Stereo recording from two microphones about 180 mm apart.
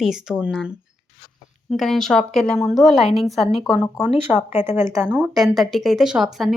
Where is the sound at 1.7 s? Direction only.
Centre (ahead or behind).